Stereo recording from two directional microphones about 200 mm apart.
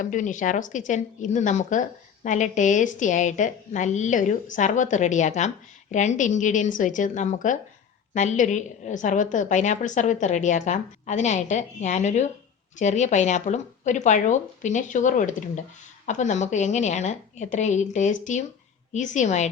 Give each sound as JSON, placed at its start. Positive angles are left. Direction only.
{"t": 0.0, "sound": "speech", "side_deg": 40}